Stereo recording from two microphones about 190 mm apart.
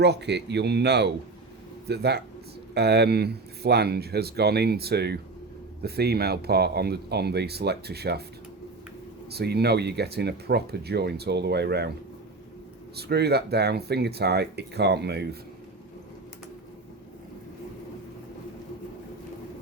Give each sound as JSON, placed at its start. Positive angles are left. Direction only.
{"t": 0.0, "sound": "speech", "side_deg": -60}
{"t": 9.3, "sound": "speech", "side_deg": -60}
{"t": 13.0, "sound": "speech", "side_deg": -60}